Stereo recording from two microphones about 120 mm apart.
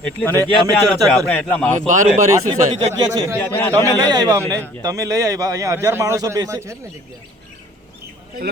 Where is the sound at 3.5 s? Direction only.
20° left (ahead or behind).